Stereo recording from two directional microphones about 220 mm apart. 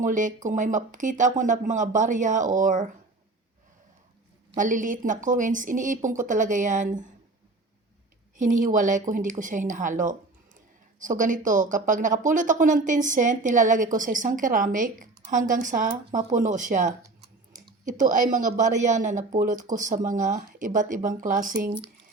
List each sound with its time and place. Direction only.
0.0 s speech: 35° right (ahead or behind)
4.5 s speech: 35° right (ahead or behind)
8.4 s speech: 35° right (ahead or behind)